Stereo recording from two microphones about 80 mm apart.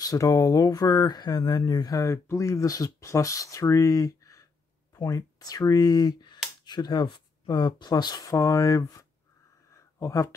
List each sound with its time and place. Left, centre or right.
0.0 s speech: left
2.0 s speech: left
9.7 s a sound: left